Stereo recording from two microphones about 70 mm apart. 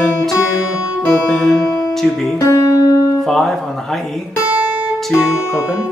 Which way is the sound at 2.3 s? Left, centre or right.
Left.